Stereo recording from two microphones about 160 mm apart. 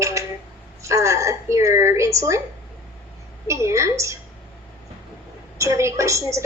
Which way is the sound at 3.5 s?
20° right (ahead or behind).